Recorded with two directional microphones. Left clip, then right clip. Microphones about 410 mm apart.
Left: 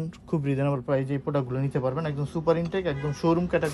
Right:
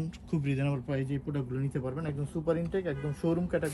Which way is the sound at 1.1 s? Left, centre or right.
Centre.